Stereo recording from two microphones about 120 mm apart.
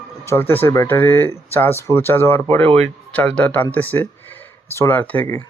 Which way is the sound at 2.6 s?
60° right (ahead or behind).